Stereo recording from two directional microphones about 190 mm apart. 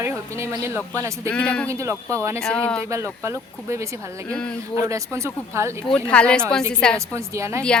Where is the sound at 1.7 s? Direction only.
15° right (ahead or behind).